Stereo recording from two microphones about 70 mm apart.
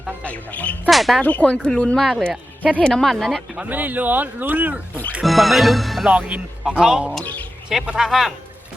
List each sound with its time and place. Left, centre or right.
0.2 s speech: centre
0.9 s music: centre
1.2 s speech: left; by 3.4 s centre
3.7 s speech: right
5.2 s music: centre
6.1 s speech: centre
7.7 s music: centre